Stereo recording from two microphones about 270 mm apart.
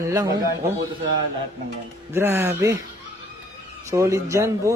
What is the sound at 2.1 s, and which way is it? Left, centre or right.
Speech, centre.